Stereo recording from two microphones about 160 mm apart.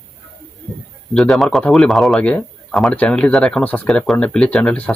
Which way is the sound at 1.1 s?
Centre (ahead or behind).